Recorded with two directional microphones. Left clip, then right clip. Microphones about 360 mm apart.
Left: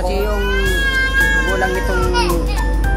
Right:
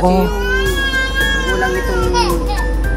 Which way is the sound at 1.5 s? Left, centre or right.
Centre.